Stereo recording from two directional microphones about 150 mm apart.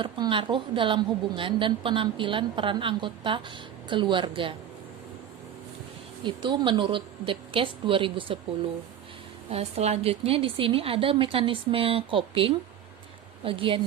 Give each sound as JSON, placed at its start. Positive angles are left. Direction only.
{"t": 0.0, "sound": "a woman's voice", "side_deg": -35}
{"t": 6.2, "sound": "a woman's voice", "side_deg": -30}
{"t": 9.5, "sound": "a woman's voice", "side_deg": -40}